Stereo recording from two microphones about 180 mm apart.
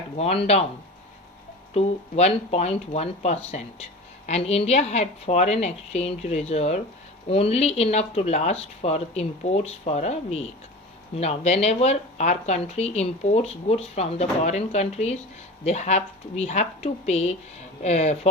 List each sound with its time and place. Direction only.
0.2 s speech: 35° left (ahead or behind)
1.7 s speech: 35° left (ahead or behind)